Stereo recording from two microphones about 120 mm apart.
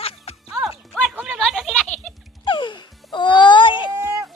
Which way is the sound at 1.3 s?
Centre (ahead or behind).